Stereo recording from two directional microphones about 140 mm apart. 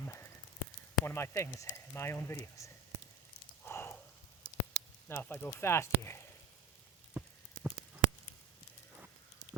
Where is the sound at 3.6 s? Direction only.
15° left (ahead or behind).